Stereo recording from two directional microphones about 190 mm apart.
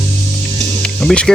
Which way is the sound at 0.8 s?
5° left (ahead or behind).